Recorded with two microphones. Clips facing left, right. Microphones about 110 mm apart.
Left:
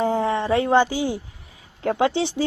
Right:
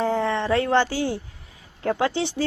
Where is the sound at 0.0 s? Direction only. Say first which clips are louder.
Left 2 dB; 15° left (ahead or behind).